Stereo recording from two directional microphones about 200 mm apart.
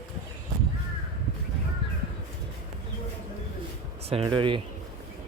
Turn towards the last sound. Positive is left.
turn(degrees=-25)  # may be behind; listen again after turning